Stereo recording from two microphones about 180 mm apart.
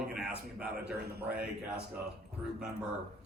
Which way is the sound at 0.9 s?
65° right (ahead or behind).